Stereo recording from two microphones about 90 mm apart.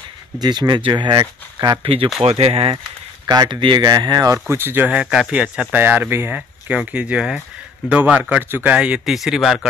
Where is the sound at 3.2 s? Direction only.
50° right (ahead or behind).